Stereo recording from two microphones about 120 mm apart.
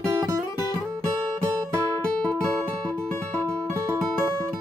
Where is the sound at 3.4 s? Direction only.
25° right (ahead or behind).